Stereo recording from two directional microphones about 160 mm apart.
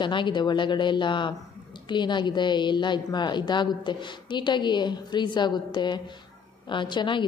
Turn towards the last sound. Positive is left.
turn(degrees=30)  # may be behind; listen again after turning